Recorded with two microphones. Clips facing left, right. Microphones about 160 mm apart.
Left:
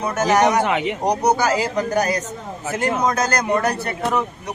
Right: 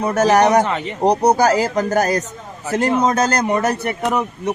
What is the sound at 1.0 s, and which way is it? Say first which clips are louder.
Speech: right 6 dB; 30° right (ahead or behind).